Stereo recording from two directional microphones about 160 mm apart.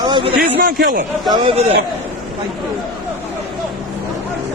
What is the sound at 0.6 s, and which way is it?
Speech, 75° right (ahead or behind).